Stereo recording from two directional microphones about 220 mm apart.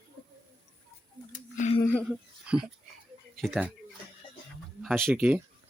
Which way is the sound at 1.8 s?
5° left (ahead or behind).